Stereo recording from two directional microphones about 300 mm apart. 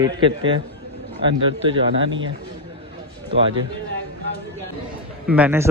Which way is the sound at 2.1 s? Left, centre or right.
Right.